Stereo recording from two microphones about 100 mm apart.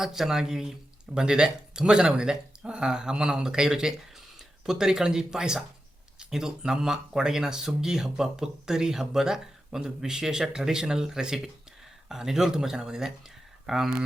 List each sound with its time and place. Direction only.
0.0 s speech: 5° right (ahead or behind)